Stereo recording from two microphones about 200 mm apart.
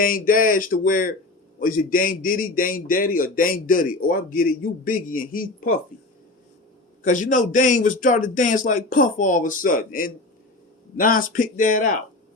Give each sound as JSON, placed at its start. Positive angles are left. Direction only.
{"t": 0.0, "sound": "a man's voice", "side_deg": 45}
{"t": 7.0, "sound": "a man's voice", "side_deg": 40}